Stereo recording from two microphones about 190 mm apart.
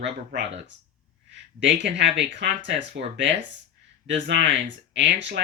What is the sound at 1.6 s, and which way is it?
Speech, 70° right (ahead or behind).